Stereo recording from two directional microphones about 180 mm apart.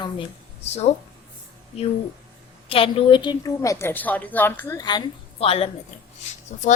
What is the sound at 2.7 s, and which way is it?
A woman's voice, 30° left (ahead or behind).